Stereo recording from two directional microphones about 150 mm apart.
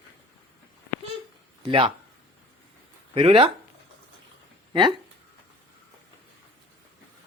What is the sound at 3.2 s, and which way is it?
Speech, 40° right (ahead or behind).